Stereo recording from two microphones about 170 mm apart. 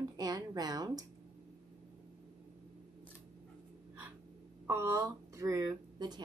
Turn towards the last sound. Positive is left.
turn(degrees=-20)  # may be behind; listen again after turning